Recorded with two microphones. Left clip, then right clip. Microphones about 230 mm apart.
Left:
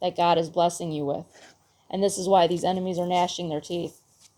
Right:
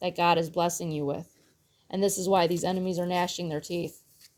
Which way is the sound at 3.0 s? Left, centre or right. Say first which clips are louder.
Left 4 dB; right.